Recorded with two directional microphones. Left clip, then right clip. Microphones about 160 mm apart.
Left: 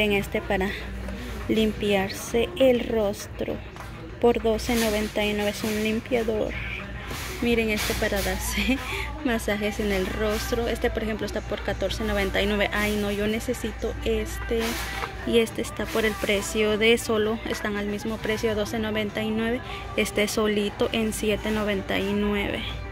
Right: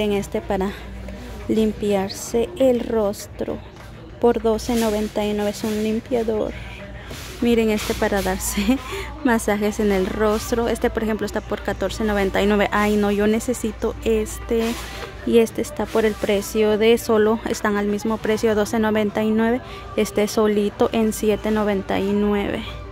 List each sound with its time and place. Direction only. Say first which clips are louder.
0.0 s speech: right 2 dB; 25° right (ahead or behind)
4.2 s a woman's voice: right 3 dB; 30° right (ahead or behind); by 14.6 s 45° right (ahead or behind)
15.2 s speech: right 6 dB; 30° right (ahead or behind)